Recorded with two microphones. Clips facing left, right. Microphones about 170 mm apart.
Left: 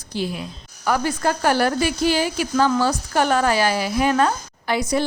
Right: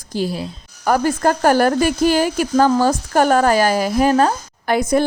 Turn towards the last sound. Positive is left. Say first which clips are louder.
# right 5 dB
turn(degrees=-50)  # may be behind; listen again after turning